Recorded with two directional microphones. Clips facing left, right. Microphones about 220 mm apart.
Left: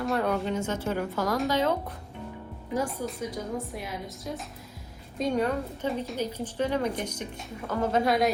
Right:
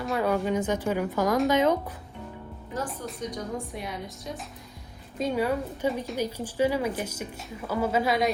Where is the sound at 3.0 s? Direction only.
5° left (ahead or behind).